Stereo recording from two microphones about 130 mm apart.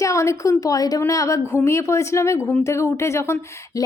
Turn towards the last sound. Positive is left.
turn(degrees=20)  # may be behind; listen again after turning